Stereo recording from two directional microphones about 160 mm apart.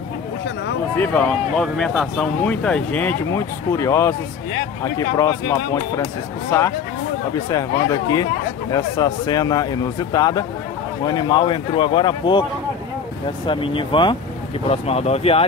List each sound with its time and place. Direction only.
0.9 s a man's voice: 10° left (ahead or behind); by 12.4 s 30° left (ahead or behind)
13.5 s speech: 30° left (ahead or behind)